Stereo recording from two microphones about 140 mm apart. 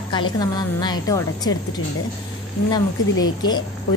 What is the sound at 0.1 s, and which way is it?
A woman's voice, 30° left (ahead or behind).